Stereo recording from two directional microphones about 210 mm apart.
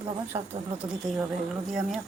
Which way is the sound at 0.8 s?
25° right (ahead or behind).